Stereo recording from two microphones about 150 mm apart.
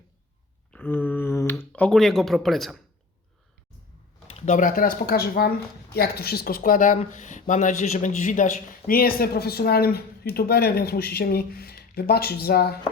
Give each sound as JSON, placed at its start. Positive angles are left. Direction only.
{"t": 0.7, "sound": "a sound", "side_deg": 10}
{"t": 4.3, "sound": "speech", "side_deg": 45}
{"t": 8.9, "sound": "speech", "side_deg": 80}